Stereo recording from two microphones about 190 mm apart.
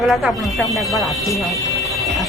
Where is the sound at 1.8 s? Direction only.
Centre (ahead or behind).